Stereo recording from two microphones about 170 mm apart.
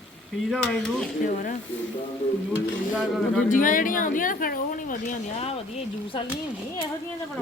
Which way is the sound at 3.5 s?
50° left (ahead or behind).